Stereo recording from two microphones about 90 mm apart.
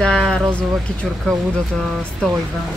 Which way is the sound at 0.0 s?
10° left (ahead or behind).